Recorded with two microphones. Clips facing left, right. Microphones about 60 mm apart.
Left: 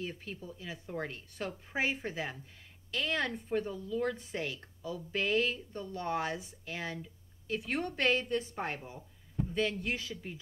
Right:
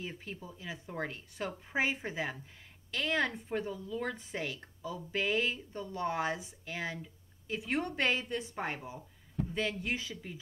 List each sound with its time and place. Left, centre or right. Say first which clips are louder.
0.0 s speech: left 2 dB; centre
1.7 s speech: right 1 dB; centre